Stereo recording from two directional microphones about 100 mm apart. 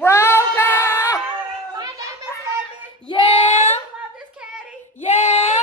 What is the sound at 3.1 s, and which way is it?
Child singing, 70° left (ahead or behind).